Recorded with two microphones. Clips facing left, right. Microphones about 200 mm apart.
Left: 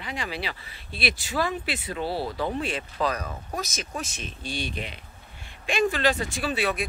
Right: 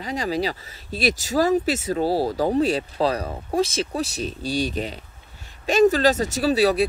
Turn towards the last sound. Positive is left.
turn(degrees=-35)  # may be behind; listen again after turning